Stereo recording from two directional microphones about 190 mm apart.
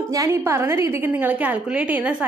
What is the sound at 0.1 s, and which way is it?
A woman's voice, 15° right (ahead or behind).